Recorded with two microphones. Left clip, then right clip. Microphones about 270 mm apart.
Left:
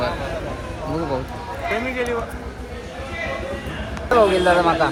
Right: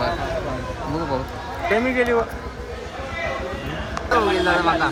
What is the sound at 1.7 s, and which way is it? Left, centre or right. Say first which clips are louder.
Speech: right 4 dB; right.